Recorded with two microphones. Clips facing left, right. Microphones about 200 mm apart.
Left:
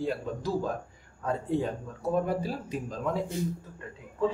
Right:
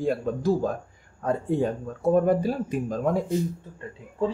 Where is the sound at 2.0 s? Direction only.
50° right (ahead or behind).